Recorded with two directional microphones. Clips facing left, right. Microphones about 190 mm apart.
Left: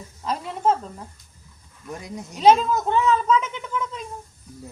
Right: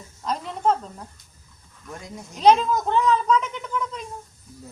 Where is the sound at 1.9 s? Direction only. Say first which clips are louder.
Left 4 dB; 15° left (ahead or behind).